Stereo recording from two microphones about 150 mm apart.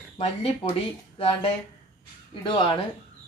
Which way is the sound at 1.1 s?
35° left (ahead or behind).